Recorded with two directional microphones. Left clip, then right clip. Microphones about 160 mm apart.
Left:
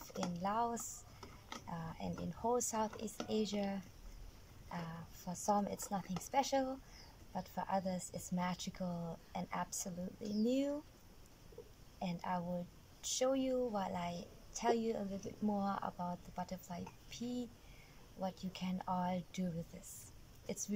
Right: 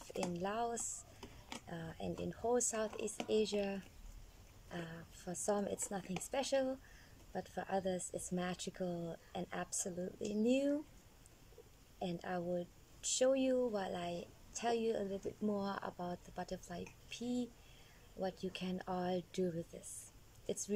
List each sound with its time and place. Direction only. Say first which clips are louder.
0.1 s a woman's voice: left 1 dB; 15° right (ahead or behind)
12.0 s a woman's voice: left 1 dB; 20° right (ahead or behind)
20.4 s speech: right 2 dB; 20° right (ahead or behind)